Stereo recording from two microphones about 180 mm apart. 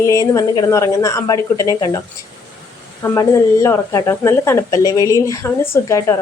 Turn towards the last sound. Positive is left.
turn(degrees=15)  # may be behind; listen again after turning